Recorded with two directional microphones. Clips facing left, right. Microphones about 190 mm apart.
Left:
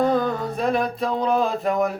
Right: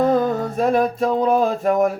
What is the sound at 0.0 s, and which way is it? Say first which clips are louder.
Music: right 3 dB; 45° right (ahead or behind).